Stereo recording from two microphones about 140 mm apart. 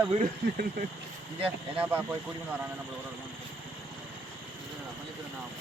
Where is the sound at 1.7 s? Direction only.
10° right (ahead or behind).